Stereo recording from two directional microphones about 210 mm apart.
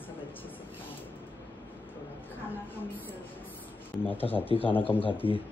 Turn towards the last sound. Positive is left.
turn(degrees=25)  # may be behind; listen again after turning